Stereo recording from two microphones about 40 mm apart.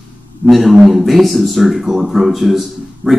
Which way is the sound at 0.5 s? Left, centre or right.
Centre.